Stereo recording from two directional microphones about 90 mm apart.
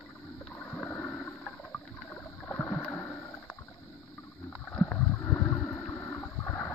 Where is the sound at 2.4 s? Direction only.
20° left (ahead or behind).